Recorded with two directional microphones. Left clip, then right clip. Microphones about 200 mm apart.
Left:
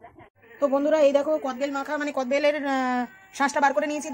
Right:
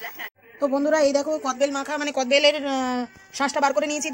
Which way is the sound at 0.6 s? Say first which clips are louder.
Even; 25° right (ahead or behind).